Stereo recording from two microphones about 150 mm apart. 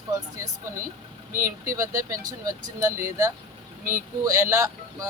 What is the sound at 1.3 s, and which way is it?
Speech, 70° right (ahead or behind).